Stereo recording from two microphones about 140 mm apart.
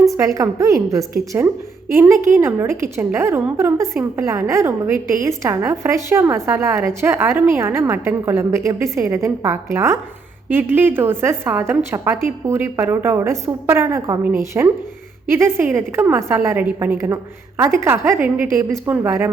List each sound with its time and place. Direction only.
0.0 s a woman's voice: 25° right (ahead or behind)